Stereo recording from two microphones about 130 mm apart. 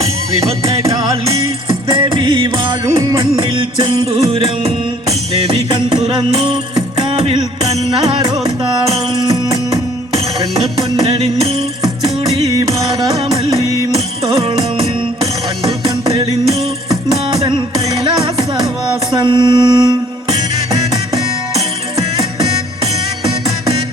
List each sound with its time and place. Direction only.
0.0 s music: 25° right (ahead or behind)
1.9 s music: 40° right (ahead or behind)
5.6 s music: 35° right (ahead or behind)
7.2 s music: 50° right (ahead or behind)
11.0 s music: 50° right (ahead or behind)
12.5 s music: 25° right (ahead or behind)
16.9 s music: 30° right (ahead or behind)